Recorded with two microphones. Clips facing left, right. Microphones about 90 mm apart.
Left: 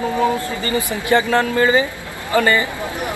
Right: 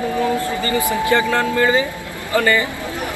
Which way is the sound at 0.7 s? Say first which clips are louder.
Even; 20° left (ahead or behind).